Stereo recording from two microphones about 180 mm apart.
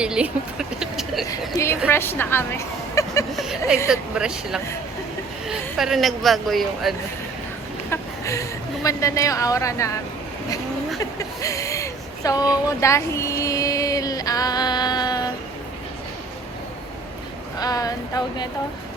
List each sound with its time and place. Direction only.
0.0 s a woman's voice: 5° right (ahead or behind)
0.8 s a sound: centre (ahead or behind)
1.3 s a woman's voice: 15° left (ahead or behind)
3.3 s a woman's voice: centre (ahead or behind)
5.7 s a woman's voice: centre (ahead or behind)
7.9 s speech: 15° left (ahead or behind)
11.2 s a sound: 20° left (ahead or behind)
17.6 s speech: 20° left (ahead or behind)